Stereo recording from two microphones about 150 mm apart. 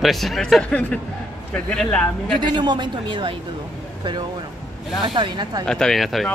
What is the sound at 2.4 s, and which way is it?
Speech, 30° right (ahead or behind).